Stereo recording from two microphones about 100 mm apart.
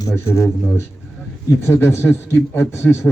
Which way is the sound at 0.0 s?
30° left (ahead or behind).